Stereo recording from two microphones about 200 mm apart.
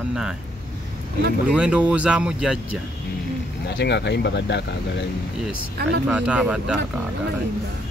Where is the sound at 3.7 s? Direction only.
55° left (ahead or behind).